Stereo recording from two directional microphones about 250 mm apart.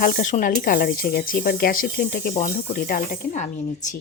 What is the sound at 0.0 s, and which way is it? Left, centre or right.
Speech, left.